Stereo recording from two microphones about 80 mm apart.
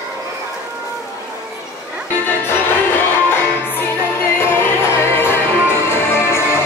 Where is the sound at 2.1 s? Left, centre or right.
Left.